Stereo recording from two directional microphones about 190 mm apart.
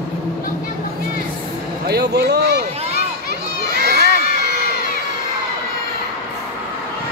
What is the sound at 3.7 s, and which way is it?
Children shouting, 60° right (ahead or behind).